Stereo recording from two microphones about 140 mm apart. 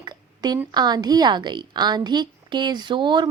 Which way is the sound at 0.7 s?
30° right (ahead or behind).